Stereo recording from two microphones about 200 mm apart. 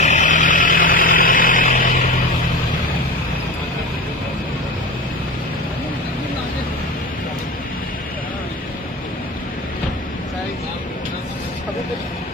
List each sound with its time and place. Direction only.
0.0 s vehicle: 35° left (ahead or behind)